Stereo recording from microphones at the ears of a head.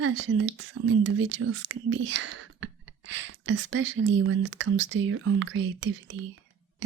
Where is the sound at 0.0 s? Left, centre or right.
Right.